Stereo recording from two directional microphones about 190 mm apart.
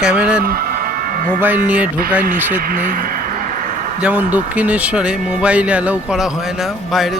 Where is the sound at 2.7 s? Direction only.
45° right (ahead or behind).